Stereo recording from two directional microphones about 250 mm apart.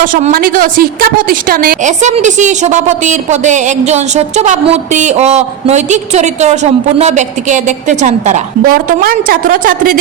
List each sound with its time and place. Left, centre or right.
0.0 s a woman's voice: right